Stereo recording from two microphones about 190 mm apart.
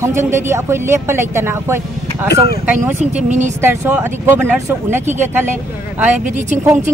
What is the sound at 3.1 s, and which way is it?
Speech, 40° right (ahead or behind).